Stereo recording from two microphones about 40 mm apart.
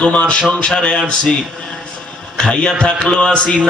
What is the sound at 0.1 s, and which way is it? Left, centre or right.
Speech, left.